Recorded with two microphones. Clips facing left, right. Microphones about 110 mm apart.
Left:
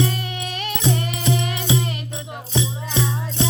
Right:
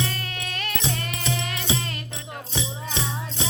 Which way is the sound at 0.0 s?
15° left (ahead or behind).